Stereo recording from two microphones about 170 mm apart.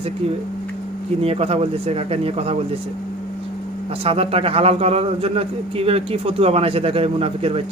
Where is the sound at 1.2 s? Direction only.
35° right (ahead or behind).